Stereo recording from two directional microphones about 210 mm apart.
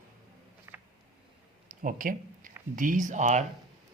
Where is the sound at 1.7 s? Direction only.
40° right (ahead or behind).